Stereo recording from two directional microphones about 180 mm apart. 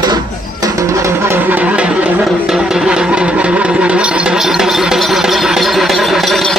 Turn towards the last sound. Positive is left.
turn(degrees=0)  # may be behind; listen again after turning